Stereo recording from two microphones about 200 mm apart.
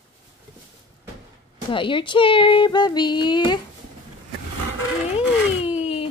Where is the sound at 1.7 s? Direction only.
25° left (ahead or behind).